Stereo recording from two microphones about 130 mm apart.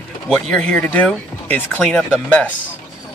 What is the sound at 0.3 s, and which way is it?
Speech, 5° left (ahead or behind).